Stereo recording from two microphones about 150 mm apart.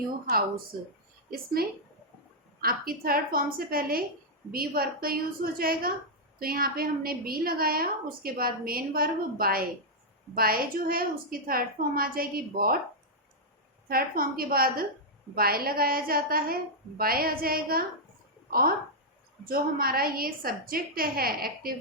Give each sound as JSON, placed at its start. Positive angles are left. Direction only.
{"t": 1.6, "sound": "speech", "side_deg": -90}
{"t": 2.6, "sound": "a woman's voice", "side_deg": -80}
{"t": 13.8, "sound": "a woman's voice", "side_deg": -75}
{"t": 19.5, "sound": "a woman's voice", "side_deg": -75}